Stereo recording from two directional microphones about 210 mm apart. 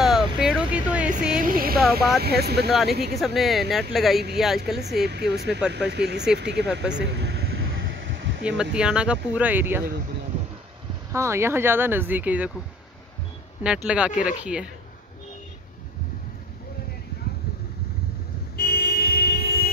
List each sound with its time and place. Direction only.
0.0 s a sound: centre (ahead or behind)
1.4 s a sound: 45° right (ahead or behind)
1.8 s a sound: centre (ahead or behind)
2.2 s speech: 50° right (ahead or behind)
3.2 s speech: centre (ahead or behind)
5.0 s speech: 50° right (ahead or behind)
7.0 s vehicle: 55° right (ahead or behind)
7.6 s a sound: 65° right (ahead or behind)
8.7 s speech: 5° right (ahead or behind)
11.1 s speech: 10° right (ahead or behind)
13.6 s speech: 5° right (ahead or behind)
18.6 s vehicle: 45° left (ahead or behind)